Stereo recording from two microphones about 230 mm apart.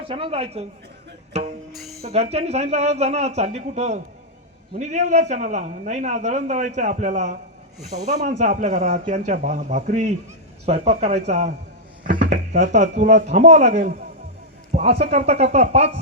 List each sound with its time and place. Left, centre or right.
0.1 s speech: right
1.3 s music: right
1.7 s music: centre
2.0 s a man's voice: right
14.7 s a sound: right
15.3 s speech: right